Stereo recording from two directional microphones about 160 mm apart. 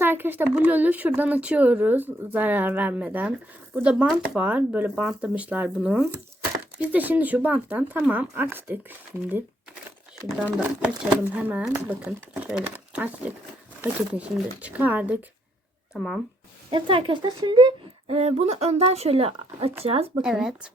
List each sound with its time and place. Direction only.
0.0 s speech: 15° right (ahead or behind)
10.8 s speech: 10° right (ahead or behind)
16.6 s speech: 30° right (ahead or behind)
20.2 s speech: 5° right (ahead or behind)